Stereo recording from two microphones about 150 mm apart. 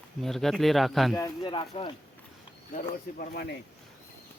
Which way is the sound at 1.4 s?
35° left (ahead or behind).